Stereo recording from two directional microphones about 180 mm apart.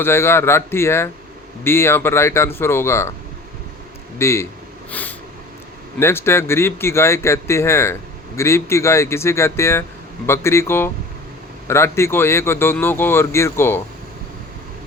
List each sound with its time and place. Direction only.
0.0 s speech: 15° left (ahead or behind)
4.2 s speech: 15° left (ahead or behind)
4.9 s a sound: 10° left (ahead or behind)
6.0 s speech: 15° left (ahead or behind)